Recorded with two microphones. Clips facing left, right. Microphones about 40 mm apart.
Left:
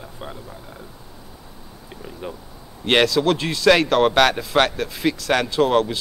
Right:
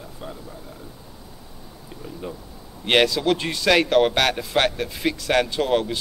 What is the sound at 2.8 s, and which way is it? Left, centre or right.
Speech, centre.